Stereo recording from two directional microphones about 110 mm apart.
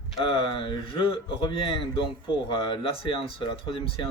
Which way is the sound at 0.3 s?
50° left (ahead or behind).